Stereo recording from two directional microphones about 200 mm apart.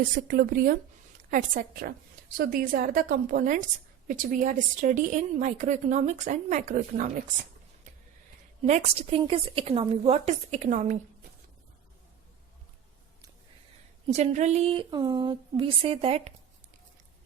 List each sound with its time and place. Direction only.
0.3 s a woman's voice: 45° right (ahead or behind)
8.6 s a woman's voice: 30° right (ahead or behind)
14.1 s a woman's voice: 35° right (ahead or behind)